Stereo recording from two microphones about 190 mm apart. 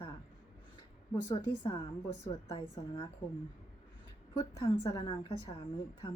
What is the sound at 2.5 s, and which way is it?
Speech, 30° left (ahead or behind).